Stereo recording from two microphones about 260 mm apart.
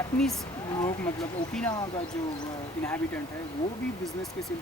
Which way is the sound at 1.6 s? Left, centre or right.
Centre.